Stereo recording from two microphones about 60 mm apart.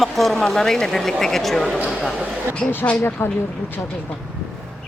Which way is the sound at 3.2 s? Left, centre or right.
Left.